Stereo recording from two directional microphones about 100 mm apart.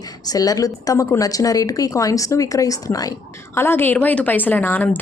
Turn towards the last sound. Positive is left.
turn(degrees=20)  # may be behind; listen again after turning